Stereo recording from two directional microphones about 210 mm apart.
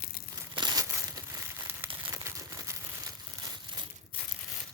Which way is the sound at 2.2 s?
15° right (ahead or behind).